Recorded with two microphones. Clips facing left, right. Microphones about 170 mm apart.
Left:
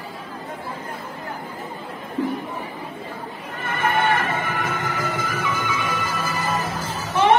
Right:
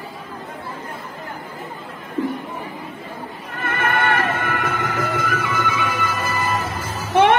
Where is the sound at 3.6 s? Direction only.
55° right (ahead or behind).